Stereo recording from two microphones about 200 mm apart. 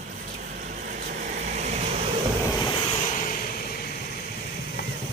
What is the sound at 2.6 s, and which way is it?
Vehicle, 30° left (ahead or behind).